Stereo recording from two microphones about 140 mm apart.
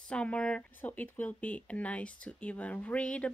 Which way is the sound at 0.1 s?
10° left (ahead or behind).